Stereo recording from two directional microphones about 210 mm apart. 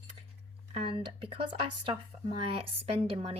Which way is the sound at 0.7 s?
25° right (ahead or behind).